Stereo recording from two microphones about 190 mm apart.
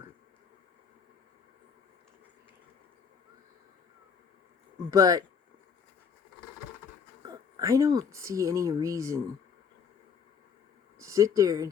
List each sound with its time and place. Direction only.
4.9 s speech: 20° right (ahead or behind)
7.2 s speech: 20° right (ahead or behind)
10.9 s speech: 15° right (ahead or behind)